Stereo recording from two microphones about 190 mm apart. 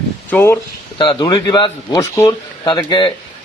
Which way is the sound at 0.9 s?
25° left (ahead or behind).